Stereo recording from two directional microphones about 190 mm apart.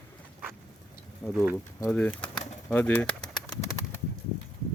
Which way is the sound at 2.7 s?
10° left (ahead or behind).